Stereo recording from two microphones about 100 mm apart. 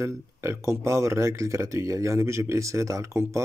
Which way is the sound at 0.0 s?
30° right (ahead or behind).